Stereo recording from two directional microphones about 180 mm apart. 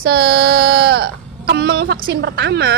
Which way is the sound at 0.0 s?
60° right (ahead or behind).